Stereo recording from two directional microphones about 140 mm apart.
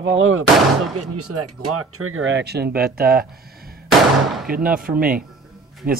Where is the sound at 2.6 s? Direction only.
90° right.